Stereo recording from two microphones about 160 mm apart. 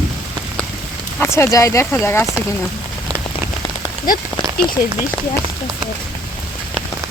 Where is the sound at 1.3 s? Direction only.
20° left (ahead or behind).